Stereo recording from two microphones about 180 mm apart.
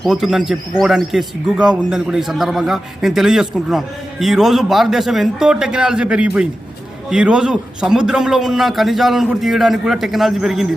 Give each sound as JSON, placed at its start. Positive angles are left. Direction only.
{"t": 0.0, "sound": "a man's voice", "side_deg": 0}